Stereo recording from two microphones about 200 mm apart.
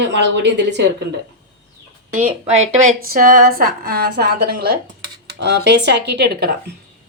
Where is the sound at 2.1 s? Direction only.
35° right (ahead or behind); by 6.5 s 55° right (ahead or behind).